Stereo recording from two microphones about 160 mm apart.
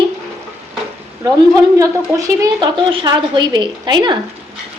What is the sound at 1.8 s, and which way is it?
A child's voice, 20° right (ahead or behind).